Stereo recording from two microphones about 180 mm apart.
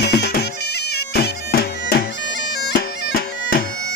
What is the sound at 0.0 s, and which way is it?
Music, 65° left (ahead or behind).